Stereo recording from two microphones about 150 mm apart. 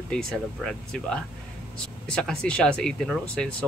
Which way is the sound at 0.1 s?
5° left (ahead or behind).